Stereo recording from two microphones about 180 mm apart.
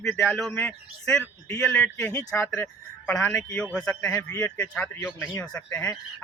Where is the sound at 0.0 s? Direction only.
Centre (ahead or behind).